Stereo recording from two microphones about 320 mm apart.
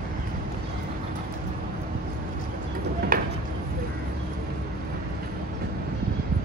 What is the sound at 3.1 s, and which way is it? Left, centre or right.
Chop, right.